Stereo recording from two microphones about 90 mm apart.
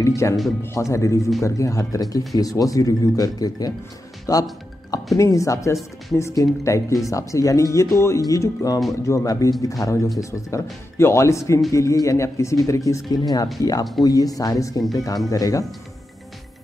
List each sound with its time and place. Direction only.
0.0 s speech: 35° left (ahead or behind)